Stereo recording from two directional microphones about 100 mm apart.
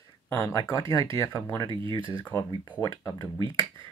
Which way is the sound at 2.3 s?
20° left (ahead or behind).